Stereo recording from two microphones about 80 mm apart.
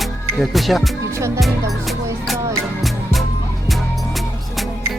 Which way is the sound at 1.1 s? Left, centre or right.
Right.